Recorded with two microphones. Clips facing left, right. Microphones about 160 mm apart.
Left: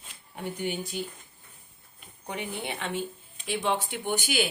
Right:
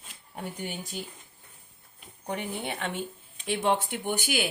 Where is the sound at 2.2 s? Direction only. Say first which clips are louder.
Right 1 dB; 50° right (ahead or behind).